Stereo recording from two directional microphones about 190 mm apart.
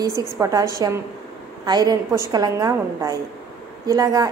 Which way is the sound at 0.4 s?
15° right (ahead or behind).